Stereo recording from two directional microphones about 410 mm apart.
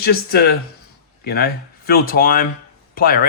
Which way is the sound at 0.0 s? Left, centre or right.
Left.